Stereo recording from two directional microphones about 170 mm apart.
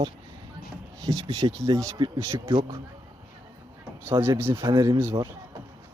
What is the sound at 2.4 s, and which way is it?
Speech, 30° right (ahead or behind).